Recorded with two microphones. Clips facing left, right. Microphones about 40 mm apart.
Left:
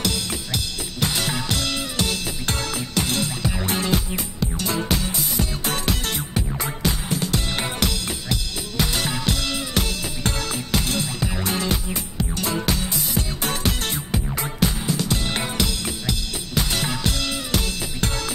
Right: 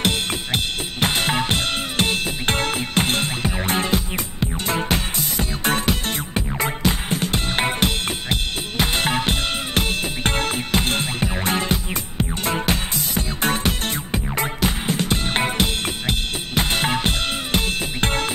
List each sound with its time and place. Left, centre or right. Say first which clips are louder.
0.0 s drum kit: right 4 dB; right
4.1 s music: right 1 dB; right